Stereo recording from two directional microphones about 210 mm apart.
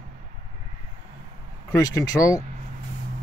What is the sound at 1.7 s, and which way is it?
Speech, 15° left (ahead or behind).